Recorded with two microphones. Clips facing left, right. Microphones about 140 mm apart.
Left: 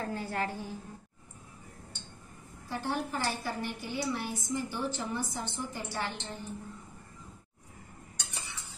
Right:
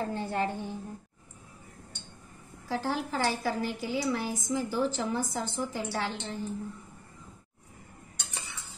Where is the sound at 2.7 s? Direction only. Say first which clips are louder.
Right 3 dB; 90° right.